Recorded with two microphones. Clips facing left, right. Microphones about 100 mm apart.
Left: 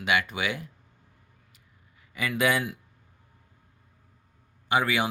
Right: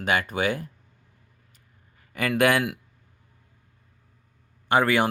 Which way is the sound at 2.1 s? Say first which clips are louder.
Right 4 dB; 60° right (ahead or behind).